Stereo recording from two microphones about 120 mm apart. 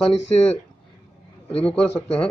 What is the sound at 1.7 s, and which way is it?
Speech, 55° left (ahead or behind).